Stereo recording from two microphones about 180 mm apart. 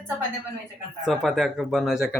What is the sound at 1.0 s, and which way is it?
Speech, centre (ahead or behind).